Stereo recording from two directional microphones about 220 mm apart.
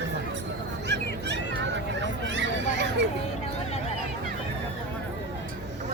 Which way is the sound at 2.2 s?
55° right (ahead or behind).